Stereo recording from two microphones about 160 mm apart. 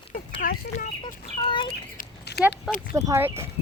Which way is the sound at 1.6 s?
90° left.